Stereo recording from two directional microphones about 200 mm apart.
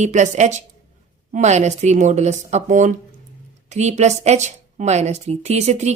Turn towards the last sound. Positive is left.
turn(degrees=-35)  # may be behind; listen again after turning